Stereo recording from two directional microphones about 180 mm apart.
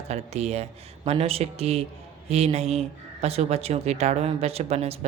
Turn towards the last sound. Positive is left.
turn(degrees=-35)  # may be behind; listen again after turning